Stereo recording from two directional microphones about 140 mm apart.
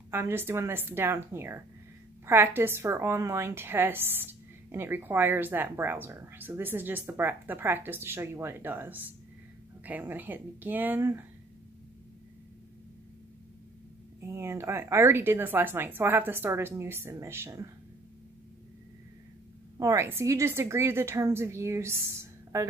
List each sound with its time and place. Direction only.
0.1 s a woman's voice: 15° right (ahead or behind)
14.2 s a woman's voice: 20° right (ahead or behind)
19.8 s a woman's voice: 20° right (ahead or behind)